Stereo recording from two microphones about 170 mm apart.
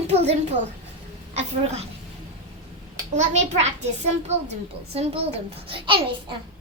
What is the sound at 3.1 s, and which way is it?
A child's voice, 40° right (ahead or behind).